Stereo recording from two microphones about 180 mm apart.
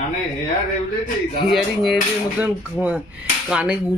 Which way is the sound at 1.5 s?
Centre (ahead or behind).